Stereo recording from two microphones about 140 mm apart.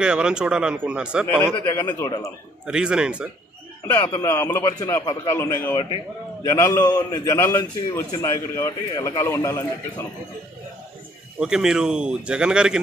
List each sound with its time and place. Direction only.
0.0 s speech: 5° right (ahead or behind)
1.2 s a man's voice: 20° left (ahead or behind)
2.6 s speech: 5° right (ahead or behind)
4.0 s a man's voice: 25° left (ahead or behind)
11.3 s speech: 5° right (ahead or behind)